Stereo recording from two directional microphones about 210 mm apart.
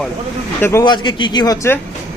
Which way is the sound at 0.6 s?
15° left (ahead or behind).